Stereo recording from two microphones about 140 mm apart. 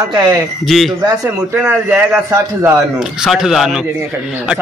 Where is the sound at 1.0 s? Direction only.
15° right (ahead or behind).